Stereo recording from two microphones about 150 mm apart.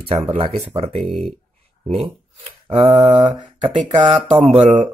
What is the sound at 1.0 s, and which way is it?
Speech, centre (ahead or behind).